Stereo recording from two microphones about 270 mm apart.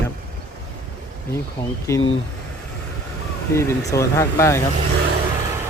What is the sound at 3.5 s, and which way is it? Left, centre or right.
Speech, centre.